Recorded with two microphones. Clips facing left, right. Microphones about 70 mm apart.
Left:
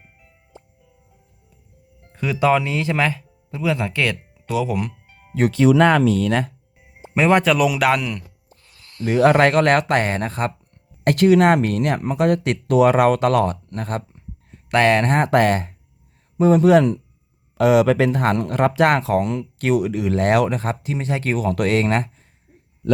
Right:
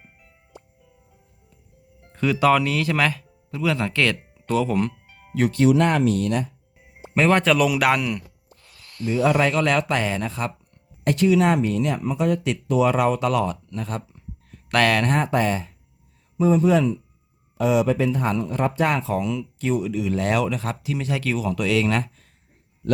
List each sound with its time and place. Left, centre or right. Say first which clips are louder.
2.1 s speech: even; centre
7.0 s speech: left 2 dB; centre
9.0 s speech: left 5 dB; left
11.0 s speech: left 4 dB; left
14.2 s a sound: even; left
15.3 s speech: left 5 dB; left
17.6 s speech: left 5 dB; left
21.3 s speech: left 4 dB; left